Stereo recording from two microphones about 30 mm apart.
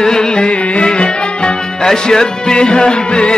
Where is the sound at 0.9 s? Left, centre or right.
Left.